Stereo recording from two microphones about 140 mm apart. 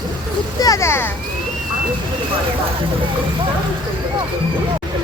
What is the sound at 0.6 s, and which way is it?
Speech, 25° left (ahead or behind).